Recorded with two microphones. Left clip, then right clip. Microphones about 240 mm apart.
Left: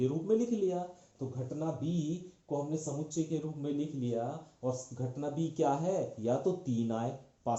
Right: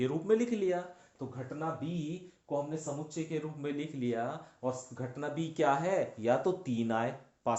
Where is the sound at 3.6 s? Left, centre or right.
Right.